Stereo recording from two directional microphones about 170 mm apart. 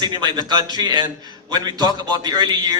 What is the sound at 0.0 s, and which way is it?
A man's voice, 25° right (ahead or behind).